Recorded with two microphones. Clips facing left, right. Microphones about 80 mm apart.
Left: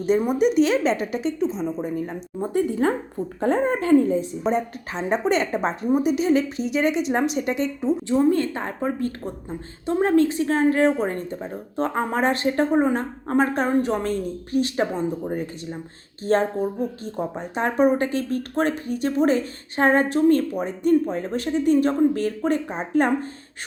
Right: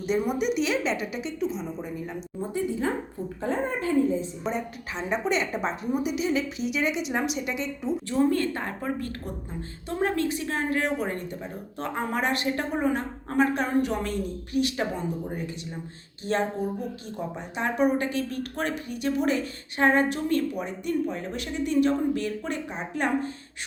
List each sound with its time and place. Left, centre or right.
0.0 s speech: left
2.4 s speech: left
3.4 s a woman's voice: left
4.5 s speech: left
8.0 s a woman's voice: left